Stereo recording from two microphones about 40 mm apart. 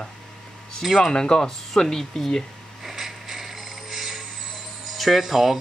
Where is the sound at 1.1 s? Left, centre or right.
Centre.